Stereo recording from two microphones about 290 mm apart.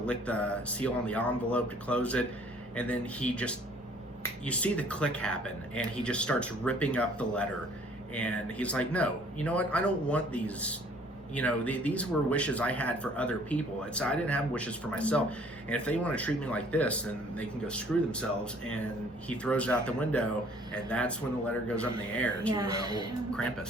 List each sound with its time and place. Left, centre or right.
0.0 s speech: centre
22.5 s speech: centre
23.3 s speech: centre